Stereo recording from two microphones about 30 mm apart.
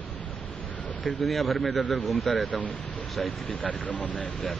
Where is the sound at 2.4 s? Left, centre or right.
Left.